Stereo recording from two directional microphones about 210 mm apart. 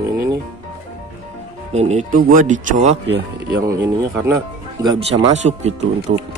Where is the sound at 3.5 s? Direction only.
15° right (ahead or behind).